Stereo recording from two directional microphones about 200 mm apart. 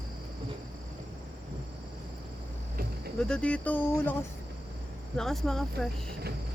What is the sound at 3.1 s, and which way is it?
Speech, 5° left (ahead or behind).